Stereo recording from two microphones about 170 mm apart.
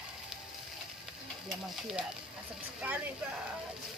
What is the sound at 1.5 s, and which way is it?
Speech, 5° right (ahead or behind).